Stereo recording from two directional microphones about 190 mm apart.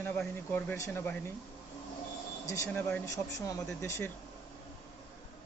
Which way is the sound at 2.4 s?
15° left (ahead or behind).